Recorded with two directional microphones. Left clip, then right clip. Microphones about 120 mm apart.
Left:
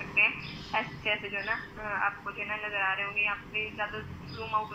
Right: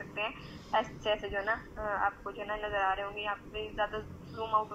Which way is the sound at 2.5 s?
30° right (ahead or behind).